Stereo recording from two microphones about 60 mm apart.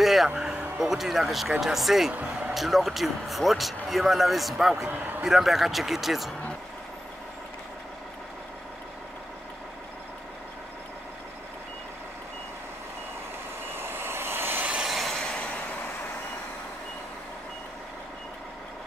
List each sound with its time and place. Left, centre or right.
0.0 s a sound: centre
0.4 s speech: centre
4.8 s a man's voice: right
5.2 s speech: centre
13.7 s vehicle: right
14.9 s a sound: centre